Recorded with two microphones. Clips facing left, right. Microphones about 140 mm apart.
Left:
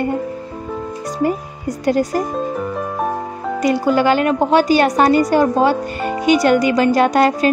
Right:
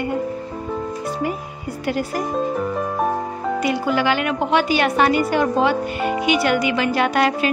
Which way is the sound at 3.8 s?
40° left (ahead or behind).